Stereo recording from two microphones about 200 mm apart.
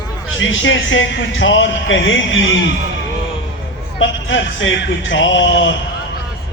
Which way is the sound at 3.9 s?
70° left (ahead or behind).